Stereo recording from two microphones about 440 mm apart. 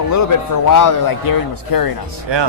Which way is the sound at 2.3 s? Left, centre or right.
Right.